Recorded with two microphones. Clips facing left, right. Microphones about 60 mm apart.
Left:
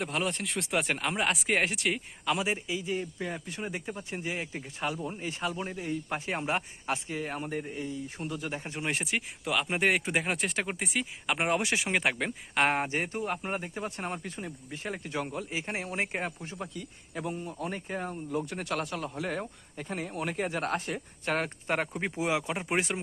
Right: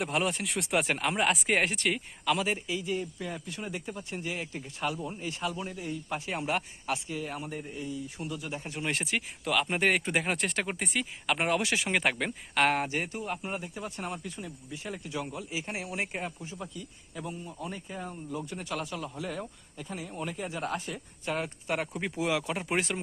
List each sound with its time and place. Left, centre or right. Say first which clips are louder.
0.0 s speech: right 2 dB; centre; by 8.8 s left
8.8 s speech: even; centre
11.5 s speech: even; left
11.9 s speech: right 1 dB; centre
12.5 s speech: even; centre
13.1 s speech: left 2 dB; left
21.7 s speech: left 1 dB; left